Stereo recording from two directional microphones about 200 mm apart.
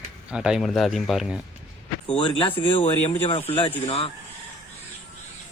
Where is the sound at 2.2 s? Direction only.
25° left (ahead or behind).